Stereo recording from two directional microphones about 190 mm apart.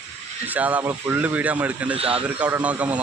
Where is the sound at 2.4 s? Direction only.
10° right (ahead or behind).